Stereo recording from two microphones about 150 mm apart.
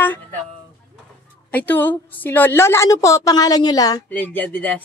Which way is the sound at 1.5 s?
10° left (ahead or behind).